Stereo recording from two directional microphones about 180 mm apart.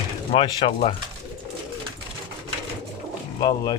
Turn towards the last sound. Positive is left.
turn(degrees=20)  # may be behind; listen again after turning